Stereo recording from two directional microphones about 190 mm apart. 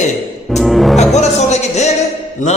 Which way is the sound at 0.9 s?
35° left (ahead or behind).